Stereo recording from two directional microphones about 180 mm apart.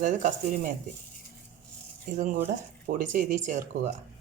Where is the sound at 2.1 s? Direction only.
45° right (ahead or behind).